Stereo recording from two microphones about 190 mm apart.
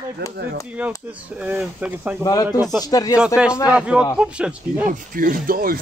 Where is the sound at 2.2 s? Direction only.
20° left (ahead or behind).